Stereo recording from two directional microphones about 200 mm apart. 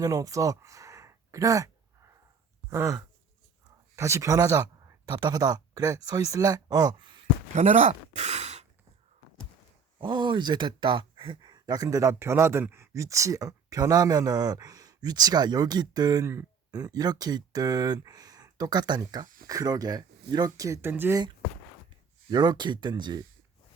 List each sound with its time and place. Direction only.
0.0 s speech: 15° right (ahead or behind)
2.6 s sigh: 15° right (ahead or behind)
3.9 s speech: 15° right (ahead or behind)
7.5 s speech: 35° right (ahead or behind)
10.0 s speech: 25° right (ahead or behind)